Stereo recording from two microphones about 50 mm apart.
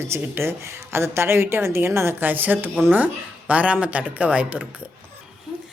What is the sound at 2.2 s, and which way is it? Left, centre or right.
Speech, right.